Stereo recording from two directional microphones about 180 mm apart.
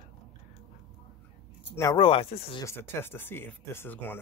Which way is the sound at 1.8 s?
25° left (ahead or behind).